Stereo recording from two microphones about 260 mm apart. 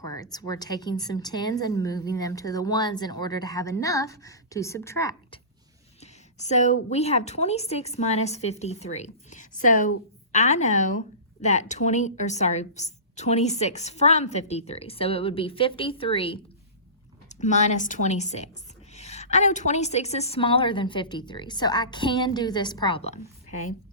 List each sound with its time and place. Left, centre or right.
0.0 s a woman's voice: centre
6.0 s a woman's voice: left